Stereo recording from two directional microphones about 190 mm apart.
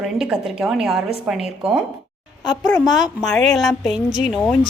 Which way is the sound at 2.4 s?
20° left (ahead or behind).